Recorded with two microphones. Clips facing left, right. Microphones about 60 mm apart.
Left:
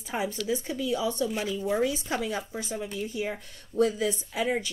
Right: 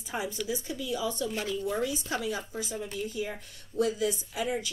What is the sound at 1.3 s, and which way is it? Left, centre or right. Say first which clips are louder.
Speech: left 3 dB; centre.